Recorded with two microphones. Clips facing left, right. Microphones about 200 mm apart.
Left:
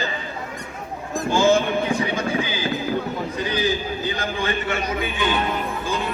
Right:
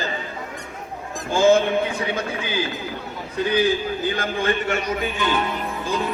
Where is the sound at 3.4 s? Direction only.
60° right (ahead or behind).